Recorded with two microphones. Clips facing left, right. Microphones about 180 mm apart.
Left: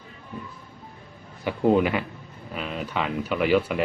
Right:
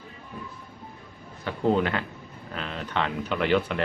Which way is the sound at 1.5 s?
10° left (ahead or behind).